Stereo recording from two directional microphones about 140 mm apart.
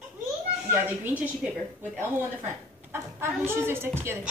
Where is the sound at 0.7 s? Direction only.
15° right (ahead or behind).